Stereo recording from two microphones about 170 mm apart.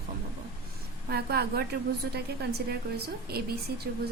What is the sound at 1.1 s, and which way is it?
A woman's voice, 70° right (ahead or behind).